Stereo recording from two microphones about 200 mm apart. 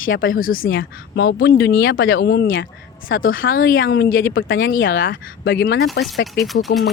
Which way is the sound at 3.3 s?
75° left (ahead or behind).